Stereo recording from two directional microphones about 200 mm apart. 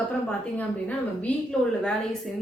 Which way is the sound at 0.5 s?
5° left (ahead or behind).